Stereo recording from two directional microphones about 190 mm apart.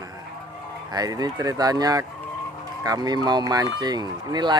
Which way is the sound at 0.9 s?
20° right (ahead or behind).